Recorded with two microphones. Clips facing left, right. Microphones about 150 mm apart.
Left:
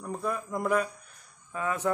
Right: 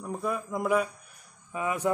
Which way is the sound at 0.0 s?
5° right (ahead or behind).